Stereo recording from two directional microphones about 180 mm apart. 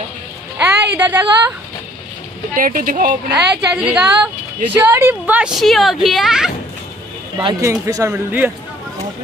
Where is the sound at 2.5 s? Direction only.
50° right (ahead or behind).